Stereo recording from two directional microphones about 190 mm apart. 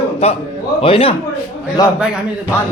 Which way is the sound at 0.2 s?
30° left (ahead or behind).